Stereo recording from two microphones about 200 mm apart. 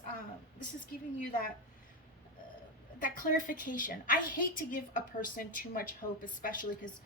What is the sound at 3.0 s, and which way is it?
A woman's voice, 45° left (ahead or behind).